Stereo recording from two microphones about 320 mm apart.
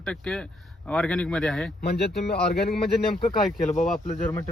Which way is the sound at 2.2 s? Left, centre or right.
Left.